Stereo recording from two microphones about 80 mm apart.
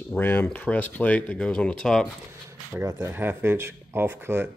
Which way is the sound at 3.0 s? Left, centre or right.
Right.